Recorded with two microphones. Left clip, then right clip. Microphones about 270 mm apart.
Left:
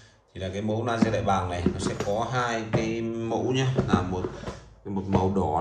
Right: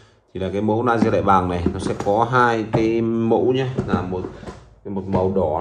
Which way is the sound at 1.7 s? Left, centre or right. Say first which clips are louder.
Right 5 dB; centre.